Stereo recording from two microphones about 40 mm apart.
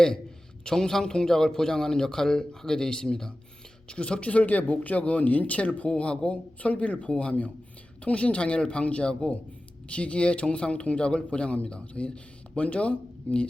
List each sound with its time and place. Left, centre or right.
0.6 s a man's voice: centre; by 13.5 s left